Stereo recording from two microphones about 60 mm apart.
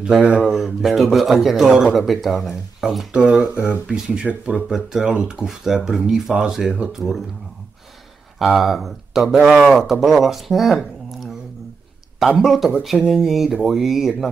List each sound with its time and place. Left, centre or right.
0.0 s a man's voice: centre
3.1 s speech: centre
4.1 s a man's voice: centre
8.4 s speech: centre
12.4 s a man's voice: centre